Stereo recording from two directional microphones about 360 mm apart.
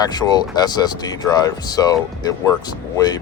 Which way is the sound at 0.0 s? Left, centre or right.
Centre.